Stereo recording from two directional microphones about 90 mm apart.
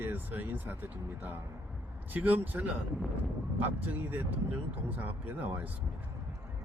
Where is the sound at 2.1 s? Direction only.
20° right (ahead or behind).